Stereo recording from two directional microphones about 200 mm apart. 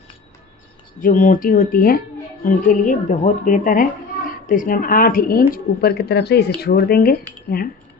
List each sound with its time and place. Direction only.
1.0 s speech: 40° left (ahead or behind)